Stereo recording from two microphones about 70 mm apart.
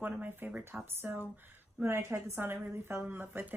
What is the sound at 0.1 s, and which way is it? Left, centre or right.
A woman's voice, right.